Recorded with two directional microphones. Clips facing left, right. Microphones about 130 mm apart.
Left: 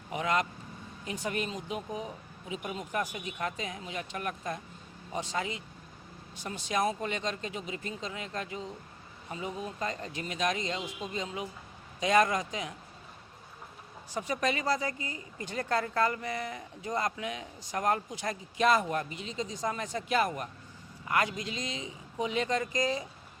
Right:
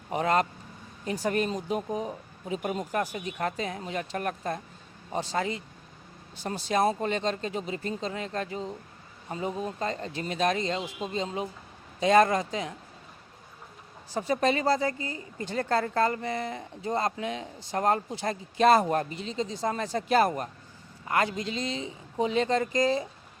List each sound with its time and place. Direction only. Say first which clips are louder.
0.1 s speech: right 5 dB; 35° right (ahead or behind)
14.1 s speech: right 5 dB; 30° right (ahead or behind)